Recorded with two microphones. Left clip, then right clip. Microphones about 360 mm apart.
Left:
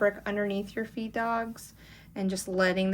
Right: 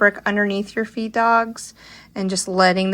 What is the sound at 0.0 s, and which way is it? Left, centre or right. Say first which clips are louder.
Speech: right 10 dB; centre.